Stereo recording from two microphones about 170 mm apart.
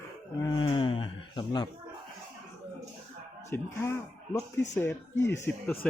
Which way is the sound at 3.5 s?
15° left (ahead or behind).